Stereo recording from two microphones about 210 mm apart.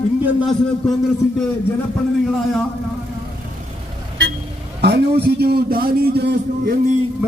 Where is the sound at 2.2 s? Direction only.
Centre (ahead or behind).